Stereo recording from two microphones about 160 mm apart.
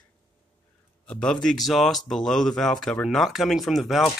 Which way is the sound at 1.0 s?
5° left (ahead or behind).